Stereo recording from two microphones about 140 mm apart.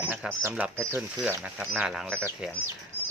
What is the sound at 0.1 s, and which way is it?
Speech, 15° right (ahead or behind).